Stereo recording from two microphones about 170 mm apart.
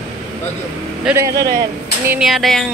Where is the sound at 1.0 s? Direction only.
15° right (ahead or behind).